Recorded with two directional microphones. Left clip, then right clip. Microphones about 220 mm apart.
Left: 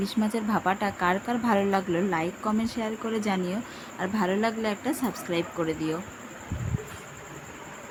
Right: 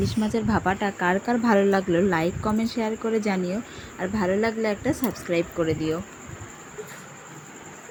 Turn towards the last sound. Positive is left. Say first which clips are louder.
# right 4 dB
turn(degrees=-10)  # may be behind; listen again after turning